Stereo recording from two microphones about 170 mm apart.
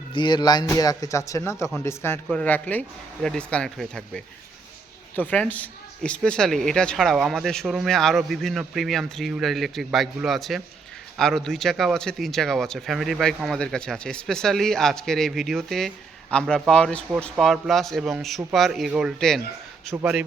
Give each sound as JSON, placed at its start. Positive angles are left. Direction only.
{"t": 0.1, "sound": "a man's voice", "side_deg": 25}